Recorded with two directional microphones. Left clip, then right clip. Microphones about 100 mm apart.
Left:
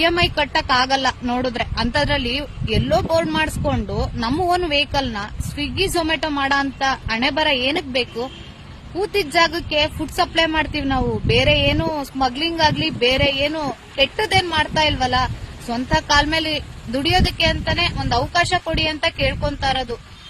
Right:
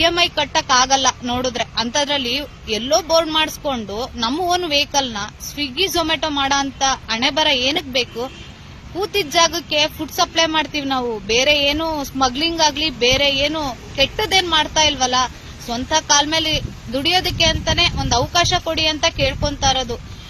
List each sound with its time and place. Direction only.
0.0 s speech: 45° left (ahead or behind)
5.6 s a woman's voice: 50° right (ahead or behind)
5.9 s speech: 45° left (ahead or behind)
10.4 s speech: 25° left (ahead or behind)
10.8 s speech: 35° left (ahead or behind)